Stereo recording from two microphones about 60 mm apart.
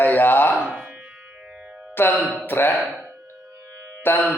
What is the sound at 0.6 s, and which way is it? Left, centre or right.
Music, centre.